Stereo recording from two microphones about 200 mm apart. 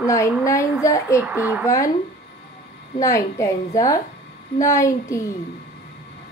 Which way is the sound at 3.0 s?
15° left (ahead or behind).